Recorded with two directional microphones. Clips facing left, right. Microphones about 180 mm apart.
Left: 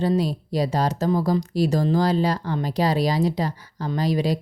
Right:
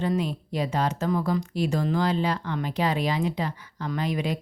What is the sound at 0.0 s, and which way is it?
Speech, 35° left (ahead or behind).